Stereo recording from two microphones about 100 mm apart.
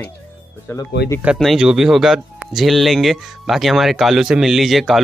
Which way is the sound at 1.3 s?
Centre (ahead or behind).